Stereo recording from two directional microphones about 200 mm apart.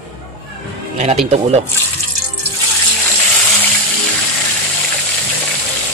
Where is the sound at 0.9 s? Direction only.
35° right (ahead or behind).